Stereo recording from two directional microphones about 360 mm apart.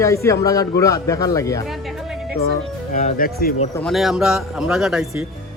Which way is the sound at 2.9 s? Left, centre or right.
Left.